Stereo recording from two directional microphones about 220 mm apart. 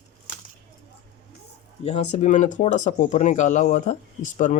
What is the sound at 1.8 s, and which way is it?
Speech, 30° left (ahead or behind).